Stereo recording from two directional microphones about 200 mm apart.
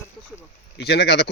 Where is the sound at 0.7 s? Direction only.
55° left (ahead or behind).